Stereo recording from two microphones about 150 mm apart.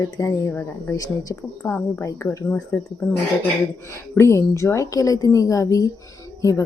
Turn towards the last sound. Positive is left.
turn(degrees=20)  # may be behind; listen again after turning